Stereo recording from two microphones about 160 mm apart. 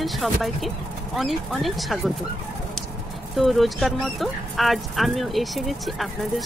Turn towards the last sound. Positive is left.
turn(degrees=0)  # may be behind; listen again after turning